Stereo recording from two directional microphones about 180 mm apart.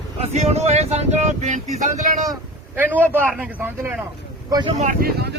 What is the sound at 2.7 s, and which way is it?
Speech, 10° right (ahead or behind).